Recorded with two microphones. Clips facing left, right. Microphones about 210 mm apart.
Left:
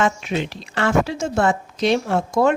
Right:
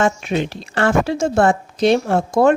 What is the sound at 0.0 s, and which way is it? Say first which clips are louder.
A woman's voice: right 3 dB; 45° right (ahead or behind).